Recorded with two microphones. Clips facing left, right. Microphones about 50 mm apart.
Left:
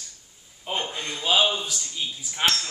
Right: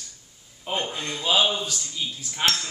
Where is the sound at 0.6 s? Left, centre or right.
Centre.